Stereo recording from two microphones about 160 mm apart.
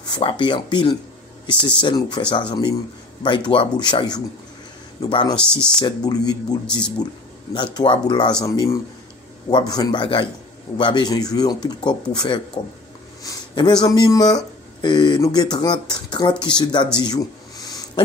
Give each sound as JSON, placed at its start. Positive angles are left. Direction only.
{"t": 0.1, "sound": "speech", "side_deg": 30}
{"t": 5.3, "sound": "speech", "side_deg": 5}
{"t": 5.8, "sound": "speech", "side_deg": 25}
{"t": 16.9, "sound": "a sound", "side_deg": 25}